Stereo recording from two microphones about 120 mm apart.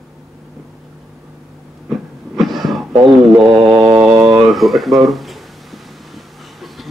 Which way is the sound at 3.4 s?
40° right (ahead or behind).